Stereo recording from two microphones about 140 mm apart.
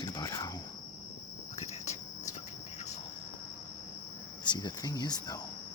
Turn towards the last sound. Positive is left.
turn(degrees=30)  # may be behind; listen again after turning